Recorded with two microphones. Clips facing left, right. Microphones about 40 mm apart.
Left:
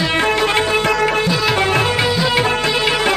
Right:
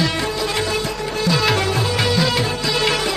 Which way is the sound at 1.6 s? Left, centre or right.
Left.